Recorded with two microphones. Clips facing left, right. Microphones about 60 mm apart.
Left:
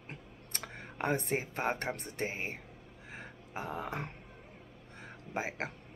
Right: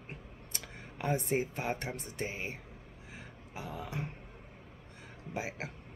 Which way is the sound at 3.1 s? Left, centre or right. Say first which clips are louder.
Left 4 dB; left.